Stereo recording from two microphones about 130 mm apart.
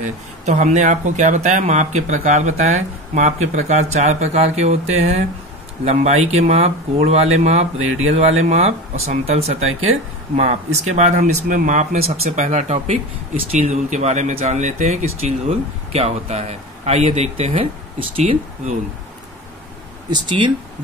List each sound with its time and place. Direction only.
0.5 s speech: 65° right (ahead or behind); by 18.4 s 45° right (ahead or behind)
20.1 s speech: 35° right (ahead or behind)